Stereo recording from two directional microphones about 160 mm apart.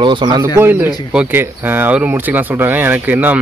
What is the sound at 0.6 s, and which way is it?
Speech, 15° right (ahead or behind).